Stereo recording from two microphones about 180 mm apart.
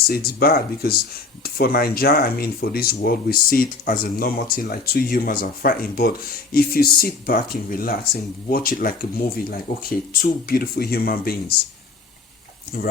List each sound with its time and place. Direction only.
0.3 s speech: 55° left (ahead or behind)